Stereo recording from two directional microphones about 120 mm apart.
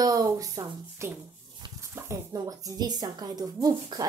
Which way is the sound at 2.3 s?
35° right (ahead or behind).